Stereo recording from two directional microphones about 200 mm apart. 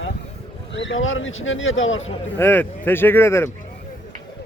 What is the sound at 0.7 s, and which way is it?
A man's voice, 70° left (ahead or behind).